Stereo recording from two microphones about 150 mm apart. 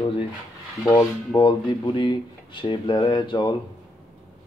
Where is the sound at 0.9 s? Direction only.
30° left (ahead or behind).